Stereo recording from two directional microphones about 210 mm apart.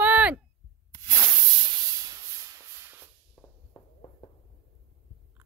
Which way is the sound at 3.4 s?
15° left (ahead or behind).